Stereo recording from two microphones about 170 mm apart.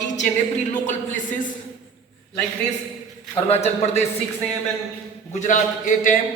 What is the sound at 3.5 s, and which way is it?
Speech, 40° left (ahead or behind).